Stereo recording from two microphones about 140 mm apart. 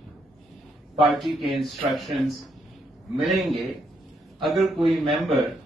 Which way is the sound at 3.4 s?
Centre (ahead or behind).